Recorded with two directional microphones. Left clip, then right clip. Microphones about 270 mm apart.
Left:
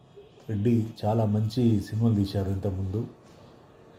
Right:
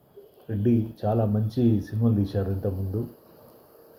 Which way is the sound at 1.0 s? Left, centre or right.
Left.